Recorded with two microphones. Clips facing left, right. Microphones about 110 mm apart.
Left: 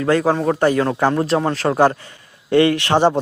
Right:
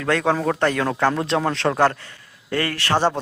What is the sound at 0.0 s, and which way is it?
A man's voice, 10° left (ahead or behind).